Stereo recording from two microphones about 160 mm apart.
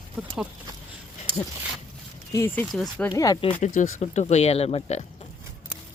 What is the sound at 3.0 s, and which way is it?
Speech, 20° left (ahead or behind).